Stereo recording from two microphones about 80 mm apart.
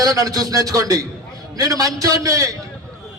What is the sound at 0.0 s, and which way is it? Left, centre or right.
A man's voice, right.